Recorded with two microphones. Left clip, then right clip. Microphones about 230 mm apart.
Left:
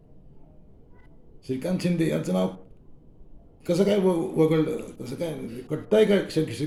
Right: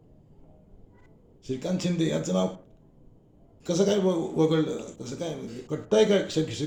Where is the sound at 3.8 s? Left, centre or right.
Centre.